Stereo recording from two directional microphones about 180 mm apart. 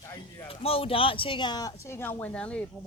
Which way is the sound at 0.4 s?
30° left (ahead or behind).